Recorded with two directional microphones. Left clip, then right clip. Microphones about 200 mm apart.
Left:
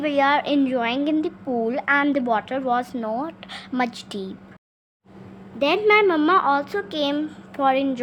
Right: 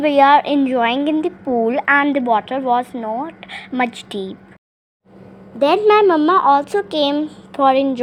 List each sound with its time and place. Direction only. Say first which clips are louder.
0.0 s a woman's voice: right 8 dB; 15° right (ahead or behind)
5.5 s a woman's voice: right 5 dB; 25° right (ahead or behind)